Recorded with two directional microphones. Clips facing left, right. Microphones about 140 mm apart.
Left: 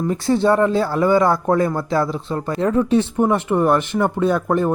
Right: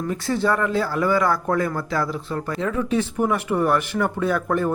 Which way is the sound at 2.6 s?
35° left (ahead or behind).